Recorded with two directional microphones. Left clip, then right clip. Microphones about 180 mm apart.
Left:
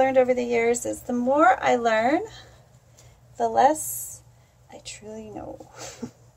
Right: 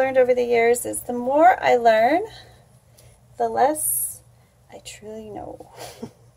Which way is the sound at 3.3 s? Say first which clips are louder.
Even; 20° left (ahead or behind).